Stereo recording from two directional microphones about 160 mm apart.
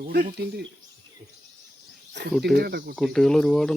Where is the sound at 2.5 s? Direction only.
80° right.